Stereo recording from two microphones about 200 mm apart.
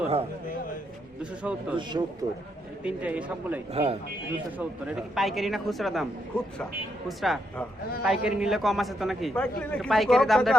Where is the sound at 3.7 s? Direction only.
30° right (ahead or behind).